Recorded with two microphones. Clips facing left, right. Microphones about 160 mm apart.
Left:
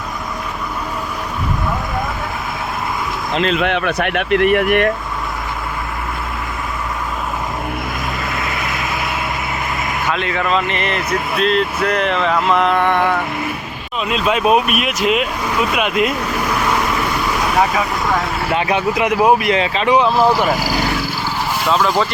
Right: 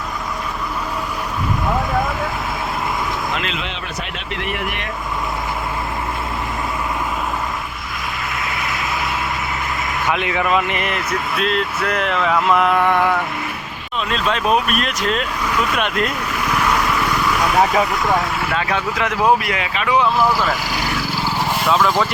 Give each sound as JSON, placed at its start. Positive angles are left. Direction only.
{"t": 3.3, "sound": "speech", "side_deg": 40}
{"t": 3.6, "sound": "speech", "side_deg": 60}
{"t": 10.1, "sound": "speech", "side_deg": -15}
{"t": 14.1, "sound": "speech", "side_deg": 10}
{"t": 18.5, "sound": "speech", "side_deg": 20}
{"t": 19.5, "sound": "speech", "side_deg": 30}